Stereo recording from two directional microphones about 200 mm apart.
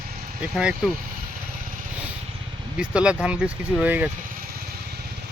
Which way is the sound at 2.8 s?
5° right (ahead or behind).